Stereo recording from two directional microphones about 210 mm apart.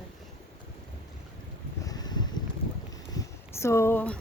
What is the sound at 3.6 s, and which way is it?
Speech, 15° left (ahead or behind).